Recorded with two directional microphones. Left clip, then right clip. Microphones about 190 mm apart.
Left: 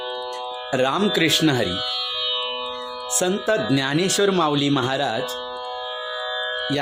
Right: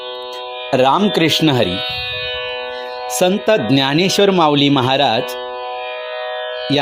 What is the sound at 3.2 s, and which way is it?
Speech, 25° right (ahead or behind).